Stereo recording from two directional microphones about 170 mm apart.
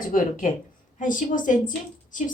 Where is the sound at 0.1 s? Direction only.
50° left (ahead or behind).